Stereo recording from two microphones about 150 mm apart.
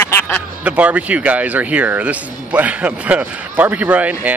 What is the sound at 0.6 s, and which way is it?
Speech, 10° right (ahead or behind).